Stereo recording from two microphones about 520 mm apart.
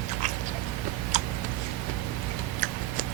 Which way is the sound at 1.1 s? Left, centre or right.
Centre.